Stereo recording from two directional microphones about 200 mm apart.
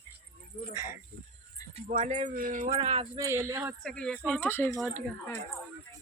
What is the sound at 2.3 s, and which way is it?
Speech, 45° right (ahead or behind).